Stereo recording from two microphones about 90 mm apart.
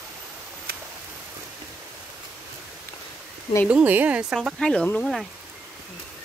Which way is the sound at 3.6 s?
15° right (ahead or behind).